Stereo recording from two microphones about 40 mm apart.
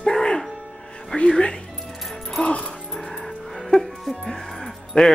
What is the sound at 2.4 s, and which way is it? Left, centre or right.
Music, left.